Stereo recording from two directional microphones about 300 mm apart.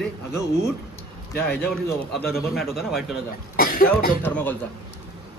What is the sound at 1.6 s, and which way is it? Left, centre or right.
A man's voice, centre.